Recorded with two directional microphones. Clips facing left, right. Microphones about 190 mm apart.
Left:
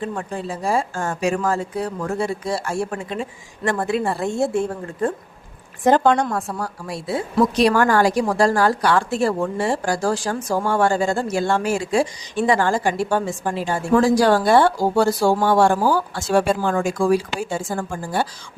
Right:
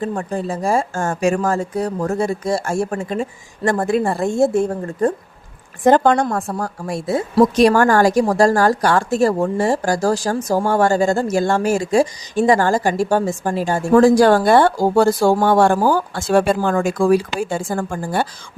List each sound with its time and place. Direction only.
0.0 s a woman's voice: 40° right (ahead or behind)